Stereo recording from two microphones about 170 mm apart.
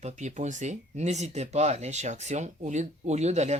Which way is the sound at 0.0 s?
45° right (ahead or behind).